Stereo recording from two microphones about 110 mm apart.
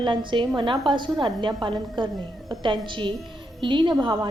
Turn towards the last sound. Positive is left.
turn(degrees=-40)  # may be behind; listen again after turning